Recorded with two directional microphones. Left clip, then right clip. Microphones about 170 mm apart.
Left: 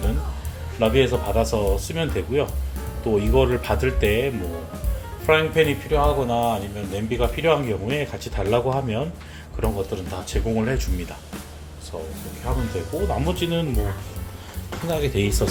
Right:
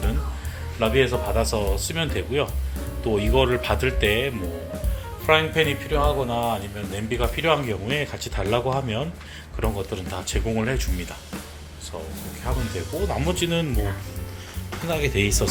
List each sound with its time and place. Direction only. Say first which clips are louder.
0.8 s speech: left 2 dB; 20° left (ahead or behind); by 11.3 s centre (ahead or behind)
12.5 s speech: left 2 dB; centre (ahead or behind)
14.8 s speech: even; 10° left (ahead or behind)